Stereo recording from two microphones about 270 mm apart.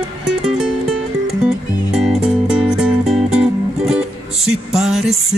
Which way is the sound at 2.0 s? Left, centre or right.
Centre.